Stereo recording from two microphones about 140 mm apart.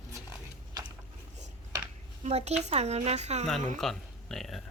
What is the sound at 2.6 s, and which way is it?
Speech, 50° right (ahead or behind).